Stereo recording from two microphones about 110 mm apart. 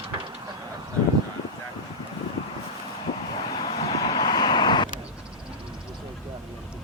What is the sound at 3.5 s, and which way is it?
Vehicle, 45° left (ahead or behind).